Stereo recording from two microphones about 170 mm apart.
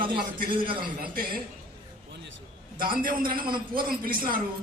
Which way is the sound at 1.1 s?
55° right (ahead or behind).